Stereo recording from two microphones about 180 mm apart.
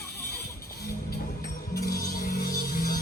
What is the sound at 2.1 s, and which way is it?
Music, 50° left (ahead or behind).